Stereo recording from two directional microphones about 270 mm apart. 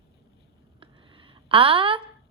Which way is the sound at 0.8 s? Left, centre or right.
Centre.